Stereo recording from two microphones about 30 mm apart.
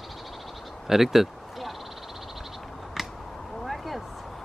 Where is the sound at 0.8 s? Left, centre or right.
Centre.